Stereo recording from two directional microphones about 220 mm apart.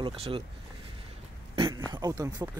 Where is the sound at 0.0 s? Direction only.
25° right (ahead or behind).